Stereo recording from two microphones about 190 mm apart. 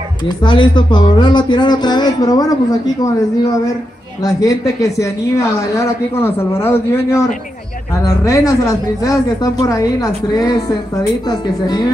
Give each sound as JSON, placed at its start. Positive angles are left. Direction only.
{"t": 0.4, "sound": "speech", "side_deg": 25}
{"t": 4.2, "sound": "a woman's voice", "side_deg": 20}